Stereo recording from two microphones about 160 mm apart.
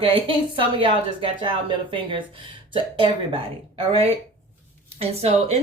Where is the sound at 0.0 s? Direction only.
30° right (ahead or behind).